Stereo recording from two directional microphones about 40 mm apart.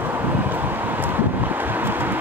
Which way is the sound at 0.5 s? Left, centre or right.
Right.